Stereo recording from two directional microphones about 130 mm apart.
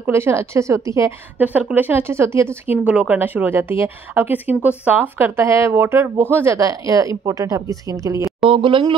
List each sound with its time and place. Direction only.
0.0 s speech: 20° right (ahead or behind)
1.4 s speech: 10° right (ahead or behind)
8.5 s speech: 40° right (ahead or behind)